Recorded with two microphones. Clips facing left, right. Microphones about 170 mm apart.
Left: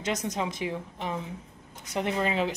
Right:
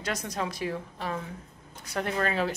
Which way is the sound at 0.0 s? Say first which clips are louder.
Left 2 dB; 20° left (ahead or behind).